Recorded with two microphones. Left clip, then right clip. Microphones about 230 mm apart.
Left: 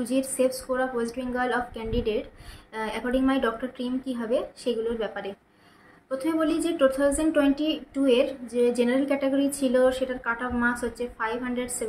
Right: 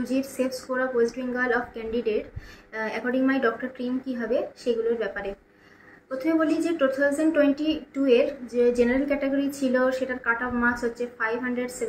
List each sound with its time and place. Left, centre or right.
0.0 s a woman's voice: centre